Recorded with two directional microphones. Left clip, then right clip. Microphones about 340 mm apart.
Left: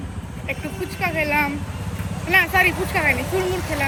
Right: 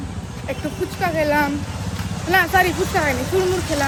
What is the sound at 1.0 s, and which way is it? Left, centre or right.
Speech, centre.